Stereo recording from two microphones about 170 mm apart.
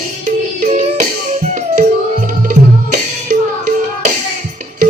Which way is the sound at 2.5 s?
45° right (ahead or behind).